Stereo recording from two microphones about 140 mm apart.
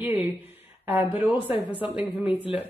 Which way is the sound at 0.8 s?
15° right (ahead or behind).